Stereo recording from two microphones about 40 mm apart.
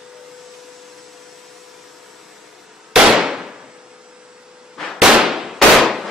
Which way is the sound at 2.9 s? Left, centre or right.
Centre.